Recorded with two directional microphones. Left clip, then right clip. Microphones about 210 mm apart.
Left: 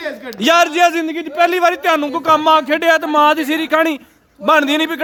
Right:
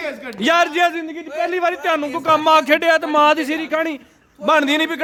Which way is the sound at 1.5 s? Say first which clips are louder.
Left 2 dB; 20° left (ahead or behind).